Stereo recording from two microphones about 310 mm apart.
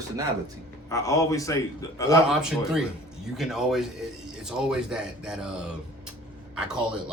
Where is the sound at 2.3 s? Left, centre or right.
Centre.